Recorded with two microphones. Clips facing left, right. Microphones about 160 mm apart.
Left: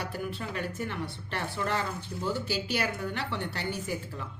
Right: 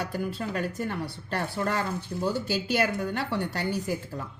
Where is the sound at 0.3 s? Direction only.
40° right (ahead or behind).